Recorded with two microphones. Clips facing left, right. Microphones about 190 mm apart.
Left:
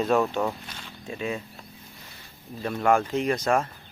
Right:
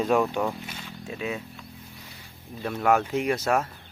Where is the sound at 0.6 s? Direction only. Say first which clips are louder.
Right 2 dB; 5° right (ahead or behind).